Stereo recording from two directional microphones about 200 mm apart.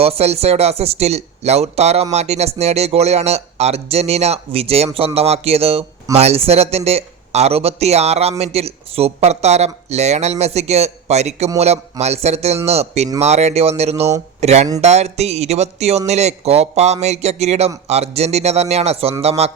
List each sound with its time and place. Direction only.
0.0 s speech: 30° right (ahead or behind)
4.9 s a sound: 30° right (ahead or behind)
6.1 s speech: 30° right (ahead or behind)